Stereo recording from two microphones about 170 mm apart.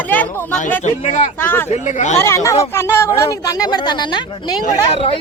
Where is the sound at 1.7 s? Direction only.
45° left (ahead or behind).